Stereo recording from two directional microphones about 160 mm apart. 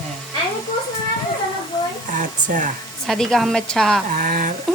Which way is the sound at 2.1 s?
55° right (ahead or behind).